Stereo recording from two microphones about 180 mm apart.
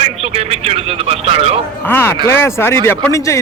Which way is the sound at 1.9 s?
10° left (ahead or behind).